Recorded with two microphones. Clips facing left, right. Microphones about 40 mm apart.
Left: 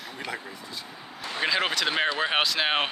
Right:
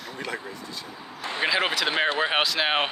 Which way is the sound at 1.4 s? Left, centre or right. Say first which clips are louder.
Right 1 dB; centre.